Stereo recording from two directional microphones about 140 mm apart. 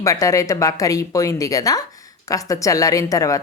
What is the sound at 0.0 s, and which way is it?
A woman's voice, 25° left (ahead or behind).